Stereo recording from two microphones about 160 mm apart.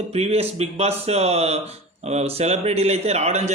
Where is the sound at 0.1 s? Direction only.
40° right (ahead or behind).